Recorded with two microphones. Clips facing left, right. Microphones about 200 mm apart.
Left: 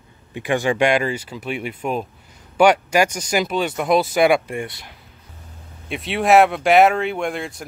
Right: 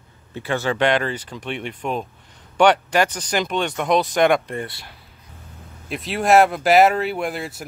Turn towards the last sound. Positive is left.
turn(degrees=-5)  # may be behind; listen again after turning